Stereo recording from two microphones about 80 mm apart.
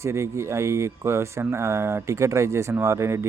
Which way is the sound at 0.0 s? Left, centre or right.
Right.